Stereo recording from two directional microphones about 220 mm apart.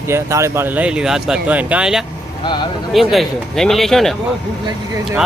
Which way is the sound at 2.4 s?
20° left (ahead or behind).